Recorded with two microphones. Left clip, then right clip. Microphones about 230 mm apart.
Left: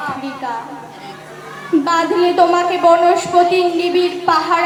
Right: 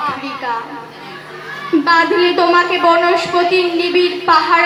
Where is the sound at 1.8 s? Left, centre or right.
Left.